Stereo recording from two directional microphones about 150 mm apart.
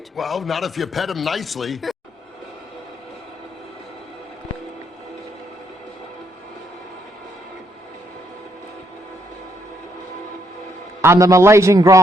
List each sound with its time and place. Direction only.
0.2 s speech: centre (ahead or behind)
11.0 s a man's voice: 20° right (ahead or behind)